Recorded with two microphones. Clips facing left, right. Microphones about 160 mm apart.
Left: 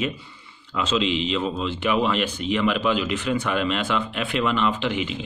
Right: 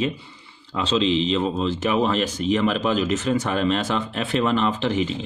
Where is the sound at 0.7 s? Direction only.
35° right (ahead or behind).